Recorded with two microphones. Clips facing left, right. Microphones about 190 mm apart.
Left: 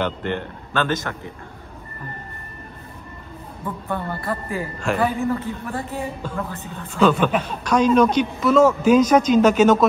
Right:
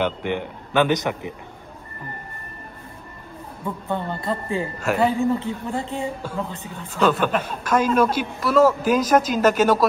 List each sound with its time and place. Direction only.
0.0 s a woman's voice: 10° right (ahead or behind)
3.6 s speech: 20° right (ahead or behind)
4.7 s a man's voice: 5° right (ahead or behind)
5.2 s a woman's voice: 15° right (ahead or behind)
7.0 s a man's voice: centre (ahead or behind)